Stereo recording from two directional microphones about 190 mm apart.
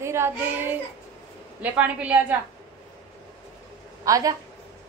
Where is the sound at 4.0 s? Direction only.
20° right (ahead or behind).